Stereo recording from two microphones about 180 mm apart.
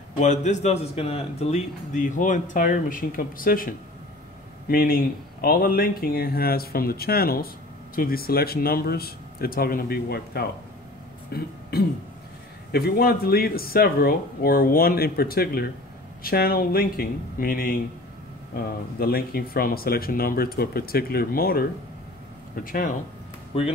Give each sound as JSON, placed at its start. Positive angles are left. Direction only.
{"t": 0.2, "sound": "a man's voice", "side_deg": 40}
{"t": 12.7, "sound": "speech", "side_deg": 60}
{"t": 22.7, "sound": "a man's voice", "side_deg": 50}